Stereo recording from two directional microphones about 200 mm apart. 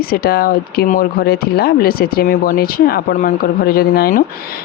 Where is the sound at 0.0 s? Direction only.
50° left (ahead or behind).